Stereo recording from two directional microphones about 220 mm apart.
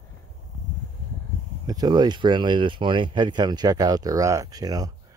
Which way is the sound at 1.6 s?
20° right (ahead or behind).